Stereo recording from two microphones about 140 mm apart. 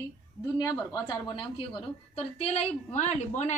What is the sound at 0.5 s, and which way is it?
A woman's voice, 25° left (ahead or behind).